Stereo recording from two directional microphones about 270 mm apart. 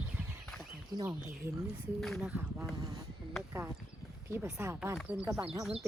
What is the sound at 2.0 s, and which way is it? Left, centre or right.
Speech, centre.